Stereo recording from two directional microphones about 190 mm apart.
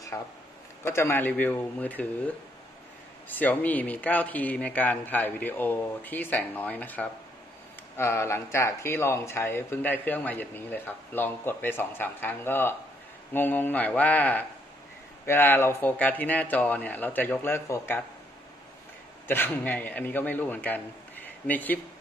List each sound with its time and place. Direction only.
0.1 s speech: 15° left (ahead or behind)
19.2 s a man's voice: 10° left (ahead or behind)